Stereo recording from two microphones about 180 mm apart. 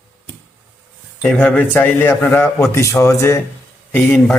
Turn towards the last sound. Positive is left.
turn(degrees=10)  # may be behind; listen again after turning